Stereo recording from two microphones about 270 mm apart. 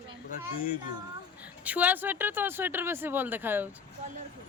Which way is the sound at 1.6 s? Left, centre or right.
Centre.